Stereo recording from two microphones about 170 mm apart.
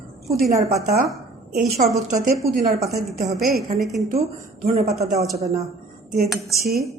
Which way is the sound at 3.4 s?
65° right (ahead or behind).